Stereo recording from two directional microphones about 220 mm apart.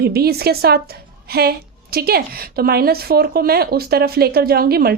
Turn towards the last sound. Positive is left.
turn(degrees=-45)  # may be behind; listen again after turning